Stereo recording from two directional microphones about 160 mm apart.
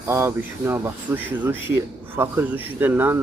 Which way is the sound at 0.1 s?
15° right (ahead or behind).